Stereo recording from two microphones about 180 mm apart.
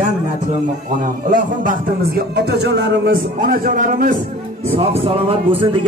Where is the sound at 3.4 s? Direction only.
50° right (ahead or behind).